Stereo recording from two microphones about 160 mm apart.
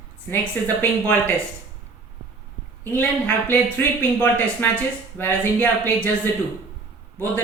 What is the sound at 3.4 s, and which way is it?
Speech, 10° left (ahead or behind).